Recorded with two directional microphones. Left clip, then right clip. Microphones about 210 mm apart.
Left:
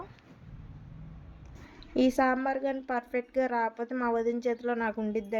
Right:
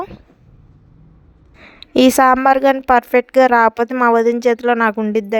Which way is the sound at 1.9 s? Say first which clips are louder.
Right 15 dB; 55° right (ahead or behind).